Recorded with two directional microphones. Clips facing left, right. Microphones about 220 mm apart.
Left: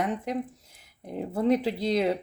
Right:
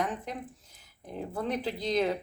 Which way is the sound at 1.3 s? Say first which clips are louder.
Left 9 dB; 25° left (ahead or behind).